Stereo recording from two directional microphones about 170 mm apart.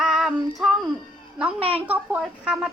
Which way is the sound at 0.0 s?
Centre (ahead or behind).